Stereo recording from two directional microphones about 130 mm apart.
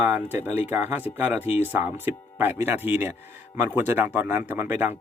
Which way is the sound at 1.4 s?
55° left (ahead or behind).